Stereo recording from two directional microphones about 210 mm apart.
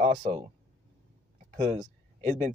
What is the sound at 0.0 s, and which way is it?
Speech, 30° right (ahead or behind).